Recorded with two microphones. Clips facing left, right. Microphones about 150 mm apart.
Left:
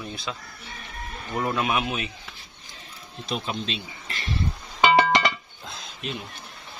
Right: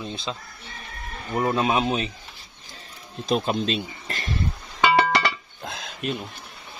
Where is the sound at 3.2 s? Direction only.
45° right (ahead or behind).